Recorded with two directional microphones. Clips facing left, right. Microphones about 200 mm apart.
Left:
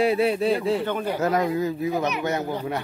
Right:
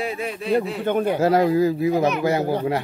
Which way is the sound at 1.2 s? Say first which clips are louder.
Right 5 dB; 30° right (ahead or behind).